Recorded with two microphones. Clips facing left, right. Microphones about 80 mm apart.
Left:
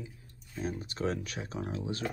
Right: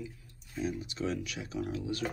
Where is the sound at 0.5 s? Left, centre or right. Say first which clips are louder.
Right 1 dB; left.